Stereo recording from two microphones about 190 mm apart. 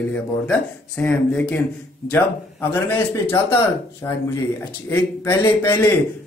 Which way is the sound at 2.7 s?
10° left (ahead or behind).